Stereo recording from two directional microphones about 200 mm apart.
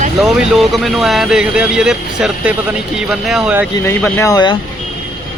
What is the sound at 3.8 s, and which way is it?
Speech, 15° left (ahead or behind).